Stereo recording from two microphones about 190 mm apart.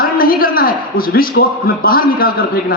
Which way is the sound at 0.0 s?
50° left (ahead or behind).